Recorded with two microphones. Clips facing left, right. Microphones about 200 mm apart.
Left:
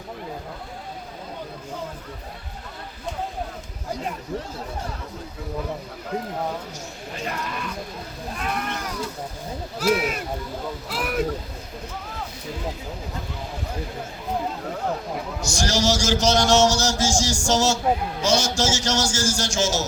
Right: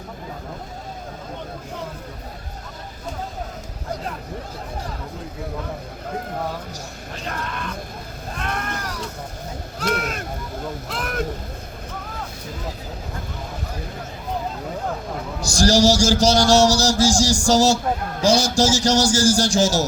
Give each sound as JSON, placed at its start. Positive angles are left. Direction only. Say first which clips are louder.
{"t": 8.4, "sound": "a sound", "louder": "even", "side_deg": 5}
{"t": 9.8, "sound": "speech", "louder": "left 3 dB", "side_deg": 5}
{"t": 15.4, "sound": "a man's voice", "louder": "right 8 dB", "side_deg": -35}